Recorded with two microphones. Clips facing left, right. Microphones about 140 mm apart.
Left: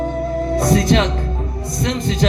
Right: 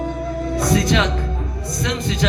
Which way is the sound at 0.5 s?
45° left (ahead or behind).